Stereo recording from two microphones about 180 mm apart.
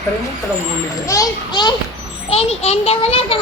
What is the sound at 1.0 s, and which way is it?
Speech, 20° left (ahead or behind).